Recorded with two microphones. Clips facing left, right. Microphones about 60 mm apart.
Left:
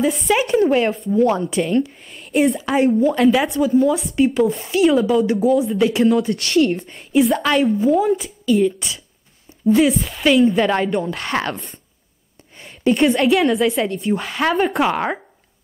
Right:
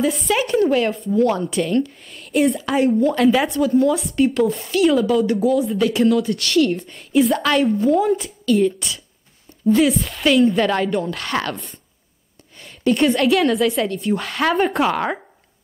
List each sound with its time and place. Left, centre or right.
0.0 s a woman's voice: centre
0.7 s speech: left
1.4 s a woman's voice: centre; by 6.7 s left
7.1 s a woman's voice: centre
12.5 s a sound: left
12.9 s a woman's voice: centre
14.8 s a woman's voice: centre